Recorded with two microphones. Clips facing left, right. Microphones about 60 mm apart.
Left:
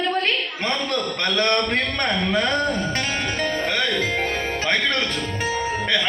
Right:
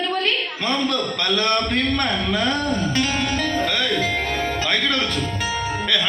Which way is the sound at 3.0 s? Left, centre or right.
Left.